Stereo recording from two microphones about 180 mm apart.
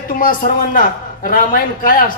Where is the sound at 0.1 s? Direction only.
50° left (ahead or behind).